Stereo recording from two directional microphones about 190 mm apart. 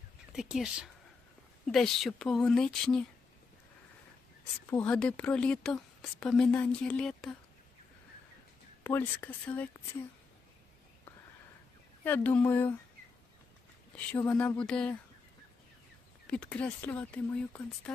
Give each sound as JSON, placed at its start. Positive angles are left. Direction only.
{"t": 0.3, "sound": "a woman's voice", "side_deg": -5}
{"t": 4.7, "sound": "a woman's voice", "side_deg": 5}
{"t": 8.8, "sound": "speech", "side_deg": 10}
{"t": 12.0, "sound": "speech", "side_deg": 10}
{"t": 13.9, "sound": "speech", "side_deg": 10}
{"t": 16.2, "sound": "speech", "side_deg": 5}